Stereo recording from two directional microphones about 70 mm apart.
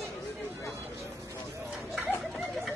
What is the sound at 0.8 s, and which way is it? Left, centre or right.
Speech, right.